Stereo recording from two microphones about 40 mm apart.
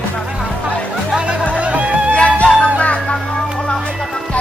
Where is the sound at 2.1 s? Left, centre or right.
Left.